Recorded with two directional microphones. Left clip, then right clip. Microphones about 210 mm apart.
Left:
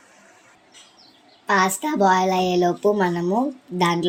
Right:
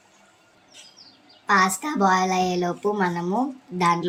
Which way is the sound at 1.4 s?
10° left (ahead or behind).